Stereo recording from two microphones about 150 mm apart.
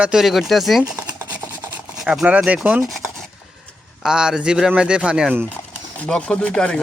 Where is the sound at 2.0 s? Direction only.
5° right (ahead or behind).